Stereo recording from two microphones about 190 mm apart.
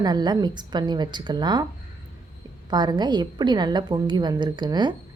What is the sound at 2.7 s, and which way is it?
A woman's voice, 20° right (ahead or behind).